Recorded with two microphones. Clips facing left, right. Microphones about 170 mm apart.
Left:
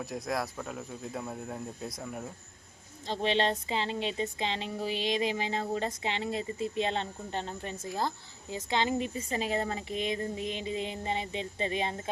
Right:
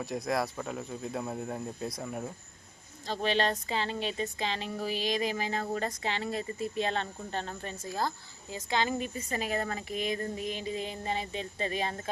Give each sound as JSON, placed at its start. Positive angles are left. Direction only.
{"t": 0.0, "sound": "speech", "side_deg": 0}
{"t": 3.1, "sound": "speech", "side_deg": 25}